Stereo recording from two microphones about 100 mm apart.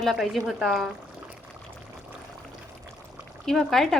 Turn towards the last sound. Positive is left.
turn(degrees=5)  # may be behind; listen again after turning